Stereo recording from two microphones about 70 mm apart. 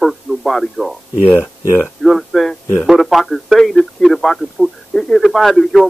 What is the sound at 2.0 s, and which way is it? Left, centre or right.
Speech, centre.